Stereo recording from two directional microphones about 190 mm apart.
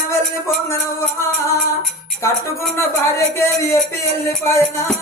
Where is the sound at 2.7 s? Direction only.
15° left (ahead or behind).